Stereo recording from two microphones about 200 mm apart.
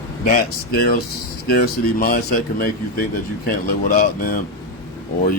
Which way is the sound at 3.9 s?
45° left (ahead or behind).